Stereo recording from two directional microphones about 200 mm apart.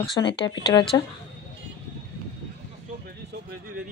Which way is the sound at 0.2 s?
15° left (ahead or behind).